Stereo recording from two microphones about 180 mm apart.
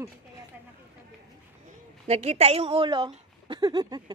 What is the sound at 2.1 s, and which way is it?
A woman's voice, 35° right (ahead or behind).